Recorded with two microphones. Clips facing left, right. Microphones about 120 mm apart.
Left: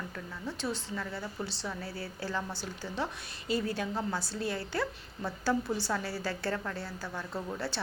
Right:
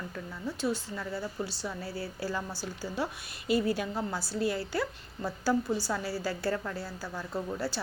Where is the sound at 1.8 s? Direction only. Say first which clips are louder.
Right 3 dB; 55° left (ahead or behind).